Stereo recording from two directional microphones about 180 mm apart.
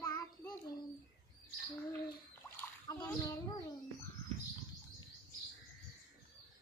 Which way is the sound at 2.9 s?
20° left (ahead or behind).